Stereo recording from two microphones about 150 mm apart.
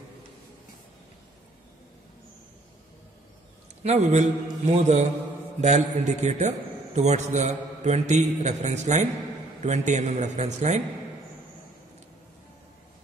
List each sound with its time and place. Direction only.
3.8 s a man's voice: 45° right (ahead or behind)